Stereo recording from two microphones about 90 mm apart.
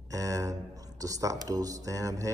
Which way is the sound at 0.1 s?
40° right (ahead or behind).